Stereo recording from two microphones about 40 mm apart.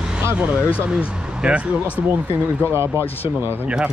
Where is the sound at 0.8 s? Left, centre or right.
Right.